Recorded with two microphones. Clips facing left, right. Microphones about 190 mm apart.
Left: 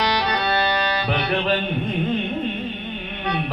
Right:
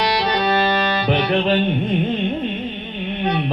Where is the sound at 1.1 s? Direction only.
20° right (ahead or behind).